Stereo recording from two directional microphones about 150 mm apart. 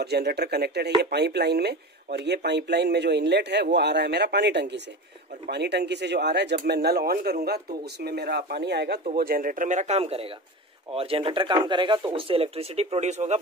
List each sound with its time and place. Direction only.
0.0 s a man's voice: 90° right
5.7 s a man's voice: 90° right
9.1 s speech: 80° right; by 13.4 s 50° right (ahead or behind)